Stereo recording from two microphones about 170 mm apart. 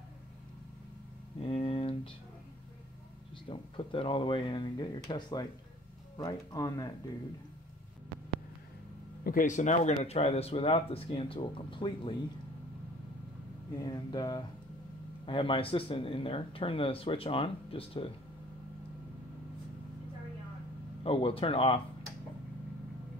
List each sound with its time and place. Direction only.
1.4 s a sound: 35° left (ahead or behind)
3.4 s speech: 30° left (ahead or behind)
9.2 s speech: 55° left (ahead or behind); by 12.2 s 30° left (ahead or behind)
13.8 s speech: 25° left (ahead or behind)
21.0 s speech: 35° left (ahead or behind)